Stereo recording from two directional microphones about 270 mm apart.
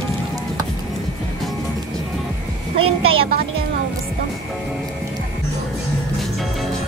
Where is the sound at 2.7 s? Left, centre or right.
Centre.